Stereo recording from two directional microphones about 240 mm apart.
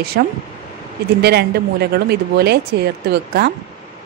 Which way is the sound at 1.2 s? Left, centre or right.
Right.